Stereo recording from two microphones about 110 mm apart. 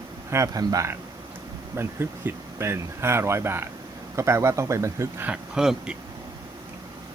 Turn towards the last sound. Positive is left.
turn(degrees=-5)  # may be behind; listen again after turning